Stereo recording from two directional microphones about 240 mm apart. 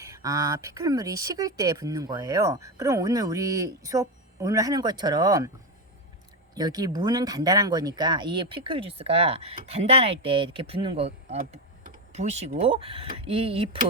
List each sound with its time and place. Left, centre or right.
0.0 s speech: centre
6.6 s speech: centre